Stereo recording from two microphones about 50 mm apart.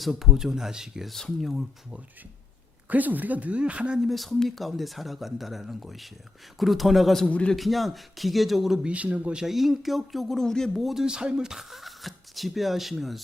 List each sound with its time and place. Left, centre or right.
0.0 s speech: centre
1.1 s speech: centre
2.9 s speech: right
4.1 s speech: centre
7.3 s a man's voice: left
7.5 s speech: centre
8.8 s a man's voice: right
9.3 s speech: centre
10.8 s speech: centre